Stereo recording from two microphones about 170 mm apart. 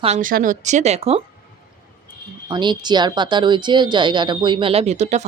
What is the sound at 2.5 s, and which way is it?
A woman's voice, 25° right (ahead or behind).